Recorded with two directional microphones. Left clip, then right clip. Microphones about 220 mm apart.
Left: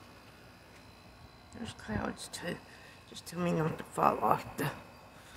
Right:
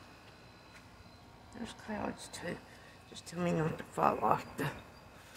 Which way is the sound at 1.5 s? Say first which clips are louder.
Left 2 dB; 5° left (ahead or behind).